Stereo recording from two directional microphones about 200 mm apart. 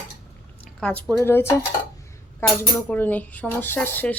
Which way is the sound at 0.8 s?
Centre (ahead or behind).